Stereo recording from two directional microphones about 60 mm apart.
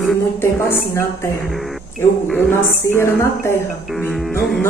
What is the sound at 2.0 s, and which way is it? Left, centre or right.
A woman's voice, left.